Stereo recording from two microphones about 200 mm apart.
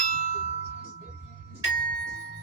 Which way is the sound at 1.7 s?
40° right (ahead or behind).